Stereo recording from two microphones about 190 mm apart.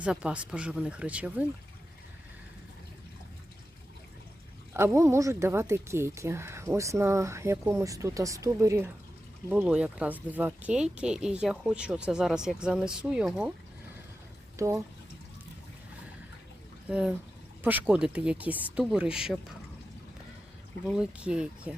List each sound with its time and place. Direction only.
0.0 s speech: 5° right (ahead or behind)
4.7 s speech: 15° right (ahead or behind)
14.5 s speech: 15° right (ahead or behind)
16.9 s speech: 5° right (ahead or behind)
20.8 s speech: 5° right (ahead or behind)